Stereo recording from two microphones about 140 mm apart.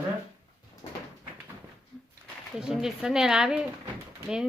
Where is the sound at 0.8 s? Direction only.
30° left (ahead or behind).